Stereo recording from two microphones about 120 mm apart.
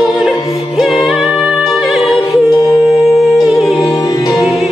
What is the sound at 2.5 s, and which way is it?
Music, 30° left (ahead or behind).